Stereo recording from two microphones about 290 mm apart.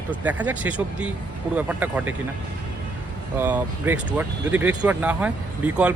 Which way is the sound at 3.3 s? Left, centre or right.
Centre.